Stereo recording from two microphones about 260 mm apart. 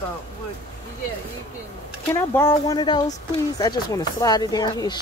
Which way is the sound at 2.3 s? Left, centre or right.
Centre.